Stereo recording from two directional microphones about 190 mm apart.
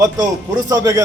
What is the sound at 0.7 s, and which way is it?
Speech, 20° right (ahead or behind).